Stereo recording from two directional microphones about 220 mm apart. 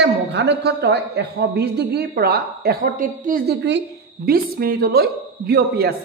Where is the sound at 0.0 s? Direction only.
50° right (ahead or behind).